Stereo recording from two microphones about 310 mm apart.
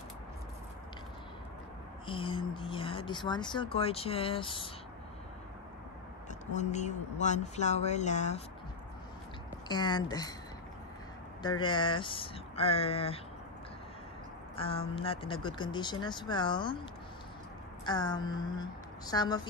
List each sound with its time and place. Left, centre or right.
2.0 s speech: centre
6.4 s speech: left
9.7 s speech: centre
11.6 s speech: centre
14.5 s speech: centre
17.8 s speech: centre